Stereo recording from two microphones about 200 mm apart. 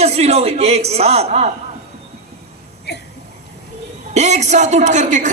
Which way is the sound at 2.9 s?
55° left (ahead or behind).